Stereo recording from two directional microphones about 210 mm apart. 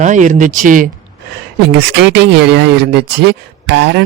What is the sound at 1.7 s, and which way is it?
Speech, 55° right (ahead or behind).